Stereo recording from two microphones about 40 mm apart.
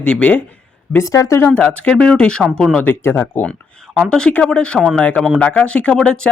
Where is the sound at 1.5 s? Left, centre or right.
Left.